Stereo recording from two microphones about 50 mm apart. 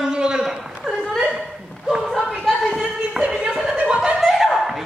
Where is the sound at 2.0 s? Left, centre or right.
Centre.